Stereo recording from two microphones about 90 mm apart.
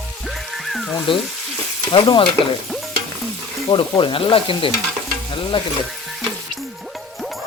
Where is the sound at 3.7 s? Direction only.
60° left (ahead or behind).